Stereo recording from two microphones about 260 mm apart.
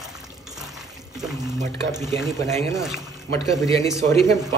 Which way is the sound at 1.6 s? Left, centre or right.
Centre.